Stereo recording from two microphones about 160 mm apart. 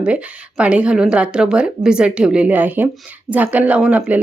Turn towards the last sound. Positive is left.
turn(degrees=-10)  # may be behind; listen again after turning